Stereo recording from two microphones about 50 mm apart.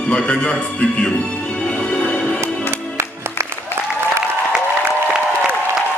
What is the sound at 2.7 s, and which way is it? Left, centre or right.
Music, right.